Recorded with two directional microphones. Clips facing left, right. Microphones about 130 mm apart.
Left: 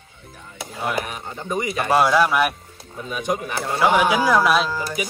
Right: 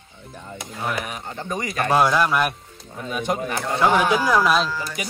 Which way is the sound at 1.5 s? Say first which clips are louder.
Left 1 dB; 5° left (ahead or behind).